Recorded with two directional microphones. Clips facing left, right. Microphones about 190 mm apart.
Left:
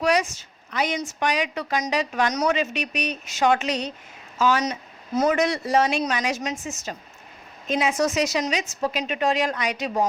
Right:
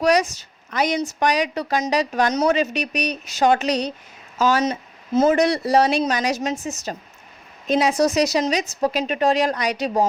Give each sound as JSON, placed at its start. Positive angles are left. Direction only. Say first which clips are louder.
{"t": 0.0, "sound": "a woman's voice", "louder": "right 4 dB", "side_deg": -40}